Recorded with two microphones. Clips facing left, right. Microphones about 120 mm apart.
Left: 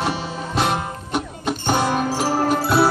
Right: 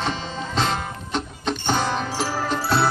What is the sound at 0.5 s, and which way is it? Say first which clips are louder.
Music: left 3 dB; 10° left (ahead or behind).